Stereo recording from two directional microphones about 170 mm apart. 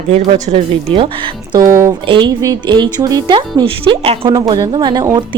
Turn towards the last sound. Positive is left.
turn(degrees=-25)  # may be behind; listen again after turning